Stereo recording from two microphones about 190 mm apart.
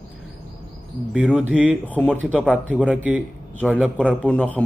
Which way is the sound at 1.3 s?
5° right (ahead or behind).